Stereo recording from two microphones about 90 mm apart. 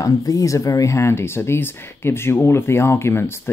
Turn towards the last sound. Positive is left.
turn(degrees=25)  # may be behind; listen again after turning